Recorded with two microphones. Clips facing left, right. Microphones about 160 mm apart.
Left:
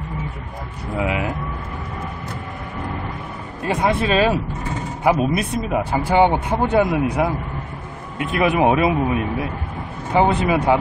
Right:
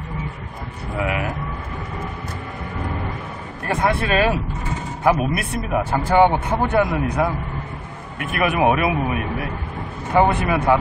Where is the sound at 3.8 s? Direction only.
20° left (ahead or behind).